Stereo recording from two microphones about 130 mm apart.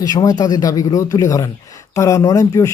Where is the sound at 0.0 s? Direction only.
30° left (ahead or behind).